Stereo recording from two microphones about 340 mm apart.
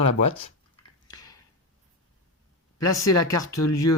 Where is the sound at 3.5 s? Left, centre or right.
Left.